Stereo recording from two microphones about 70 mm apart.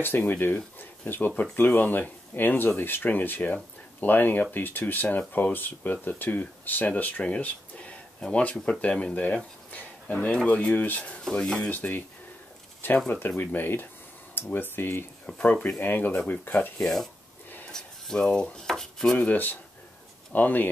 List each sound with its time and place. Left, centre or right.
0.0 s speech: left
11.2 s speech: centre
11.7 s speech: left
15.2 s speech: centre
16.8 s speech: centre
19.1 s speech: left